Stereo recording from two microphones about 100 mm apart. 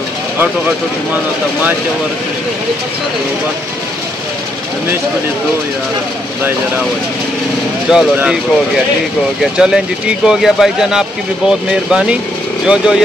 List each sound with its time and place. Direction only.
0.4 s speech: 15° right (ahead or behind)
7.9 s speech: 5° right (ahead or behind)
9.4 s speech: 5° right (ahead or behind)